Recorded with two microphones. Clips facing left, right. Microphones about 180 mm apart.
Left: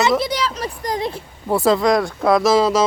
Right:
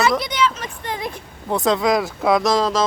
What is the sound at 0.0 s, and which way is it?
A child's voice, 25° left (ahead or behind).